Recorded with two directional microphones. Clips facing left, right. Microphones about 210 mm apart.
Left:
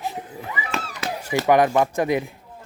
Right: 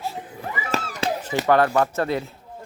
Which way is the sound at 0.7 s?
40° right (ahead or behind).